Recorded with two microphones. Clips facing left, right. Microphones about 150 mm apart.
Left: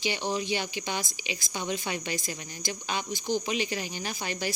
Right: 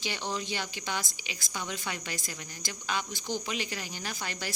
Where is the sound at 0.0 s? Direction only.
15° left (ahead or behind).